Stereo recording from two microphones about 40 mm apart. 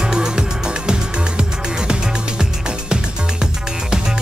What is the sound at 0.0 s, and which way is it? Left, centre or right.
Music, centre.